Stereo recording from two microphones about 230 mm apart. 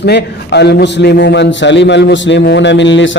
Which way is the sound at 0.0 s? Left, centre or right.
Left.